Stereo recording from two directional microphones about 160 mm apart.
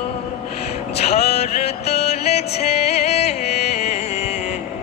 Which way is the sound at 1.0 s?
40° left (ahead or behind).